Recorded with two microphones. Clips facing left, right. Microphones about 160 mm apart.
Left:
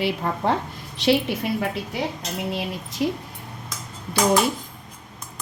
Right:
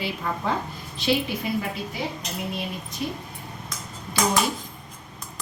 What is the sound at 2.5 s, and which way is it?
Speech, 90° left.